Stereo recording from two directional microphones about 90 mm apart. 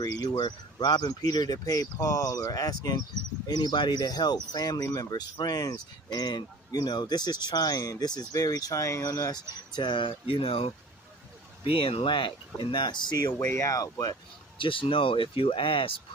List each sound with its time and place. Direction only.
0.0 s speech: 50° left (ahead or behind)
13.4 s speech: 30° left (ahead or behind)
14.6 s speech: 75° left (ahead or behind)